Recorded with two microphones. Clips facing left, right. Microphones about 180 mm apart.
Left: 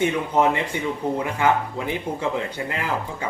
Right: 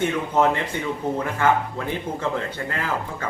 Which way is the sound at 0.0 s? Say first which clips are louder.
Even; 15° left (ahead or behind).